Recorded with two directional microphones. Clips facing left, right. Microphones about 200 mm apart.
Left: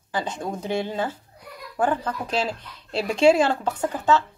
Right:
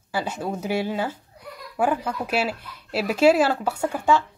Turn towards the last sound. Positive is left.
turn(degrees=-10)  # may be behind; listen again after turning